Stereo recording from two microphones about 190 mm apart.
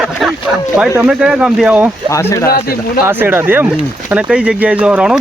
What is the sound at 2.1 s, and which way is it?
Speech, 15° left (ahead or behind).